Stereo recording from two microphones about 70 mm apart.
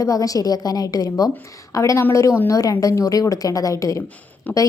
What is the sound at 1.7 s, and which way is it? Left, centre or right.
A woman's voice, left.